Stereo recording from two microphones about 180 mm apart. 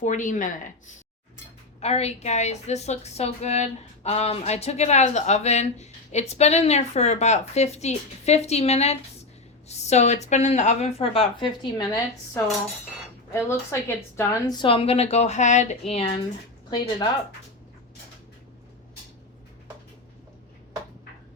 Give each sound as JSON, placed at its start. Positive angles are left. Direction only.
{"t": 0.0, "sound": "speech", "side_deg": 45}
{"t": 1.8, "sound": "a woman's voice", "side_deg": 35}
{"t": 16.6, "sound": "speech", "side_deg": 25}